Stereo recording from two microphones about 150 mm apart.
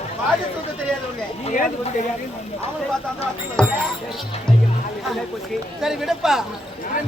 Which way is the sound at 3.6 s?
5° left (ahead or behind).